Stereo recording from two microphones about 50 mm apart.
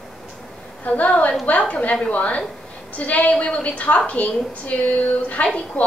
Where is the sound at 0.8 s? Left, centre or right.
Left.